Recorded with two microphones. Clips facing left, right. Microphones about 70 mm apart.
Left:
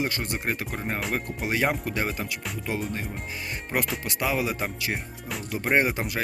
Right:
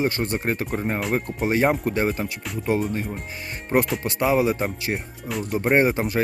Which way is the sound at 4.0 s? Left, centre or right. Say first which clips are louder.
Right 7 dB; right.